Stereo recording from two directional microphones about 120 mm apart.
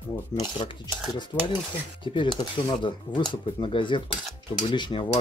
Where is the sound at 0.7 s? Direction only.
40° left (ahead or behind).